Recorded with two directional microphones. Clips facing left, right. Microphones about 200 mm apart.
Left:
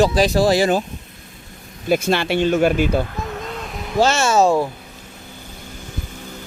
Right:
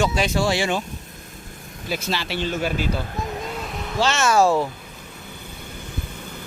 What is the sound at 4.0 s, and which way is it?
Speech, 35° left (ahead or behind).